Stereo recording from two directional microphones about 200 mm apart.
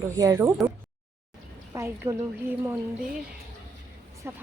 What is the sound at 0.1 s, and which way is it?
Speech, 15° right (ahead or behind).